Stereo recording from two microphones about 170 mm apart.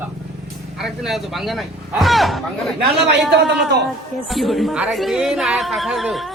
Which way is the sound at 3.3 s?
85° right.